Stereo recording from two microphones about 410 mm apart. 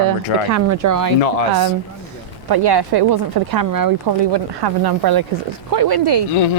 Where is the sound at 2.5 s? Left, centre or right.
Right.